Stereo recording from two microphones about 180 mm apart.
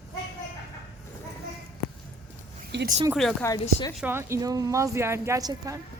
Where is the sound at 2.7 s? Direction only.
75° right (ahead or behind).